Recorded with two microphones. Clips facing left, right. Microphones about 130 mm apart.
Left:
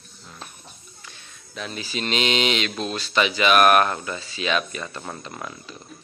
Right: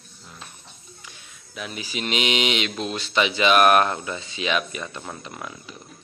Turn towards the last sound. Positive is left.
turn(degrees=-5)  # may be behind; listen again after turning